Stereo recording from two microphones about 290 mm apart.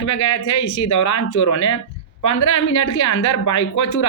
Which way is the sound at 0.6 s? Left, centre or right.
Left.